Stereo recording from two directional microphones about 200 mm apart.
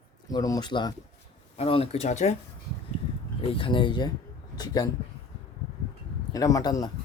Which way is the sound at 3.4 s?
25° left (ahead or behind).